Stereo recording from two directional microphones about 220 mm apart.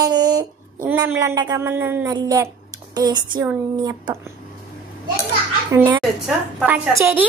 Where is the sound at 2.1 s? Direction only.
15° right (ahead or behind).